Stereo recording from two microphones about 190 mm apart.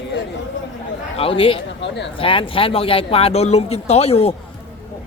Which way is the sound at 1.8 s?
65° left (ahead or behind).